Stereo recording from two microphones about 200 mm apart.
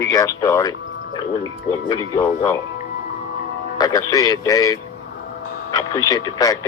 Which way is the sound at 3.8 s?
20° left (ahead or behind).